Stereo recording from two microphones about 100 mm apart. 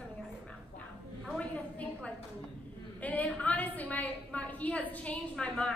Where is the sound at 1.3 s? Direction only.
10° left (ahead or behind).